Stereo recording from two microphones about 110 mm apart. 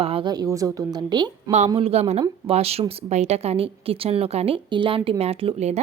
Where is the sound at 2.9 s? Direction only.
85° right.